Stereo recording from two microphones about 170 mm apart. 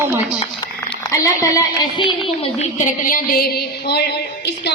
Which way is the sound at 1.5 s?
25° left (ahead or behind).